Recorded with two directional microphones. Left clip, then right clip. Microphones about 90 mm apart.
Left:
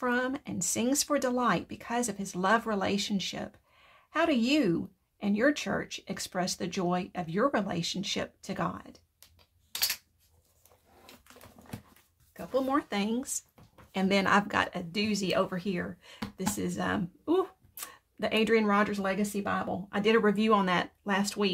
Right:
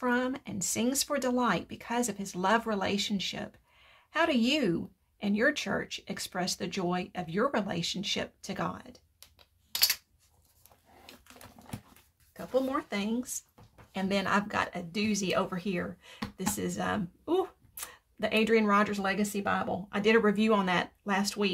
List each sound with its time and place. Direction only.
0.0 s speech: 35° left (ahead or behind)
11.6 s dog: 45° right (ahead or behind)
12.4 s speech: 25° left (ahead or behind)
12.9 s speech: 65° left (ahead or behind)
14.3 s speech: 90° left; by 15.0 s 60° left (ahead or behind)
15.0 s speech: 40° left (ahead or behind)
17.2 s a sound: 20° left (ahead or behind)
18.2 s speech: 30° left (ahead or behind)
19.2 s speech: 5° left (ahead or behind)
19.9 s speech: 30° left (ahead or behind)